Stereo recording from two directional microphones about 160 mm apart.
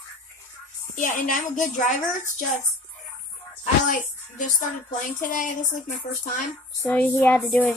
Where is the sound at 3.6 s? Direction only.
55° left (ahead or behind).